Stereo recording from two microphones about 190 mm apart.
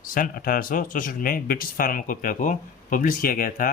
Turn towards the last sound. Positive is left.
turn(degrees=50)  # may be behind; listen again after turning